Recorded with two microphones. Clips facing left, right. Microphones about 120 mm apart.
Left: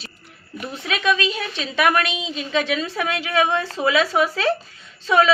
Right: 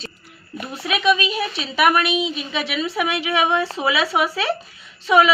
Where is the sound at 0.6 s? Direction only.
15° right (ahead or behind).